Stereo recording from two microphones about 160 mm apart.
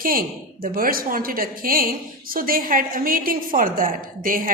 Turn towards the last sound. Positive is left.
turn(degrees=-60)  # may be behind; listen again after turning